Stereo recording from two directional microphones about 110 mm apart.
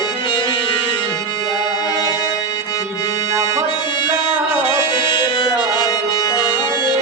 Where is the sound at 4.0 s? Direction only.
50° left (ahead or behind).